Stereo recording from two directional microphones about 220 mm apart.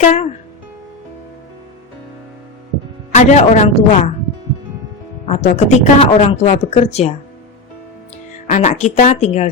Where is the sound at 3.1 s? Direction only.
30° left (ahead or behind).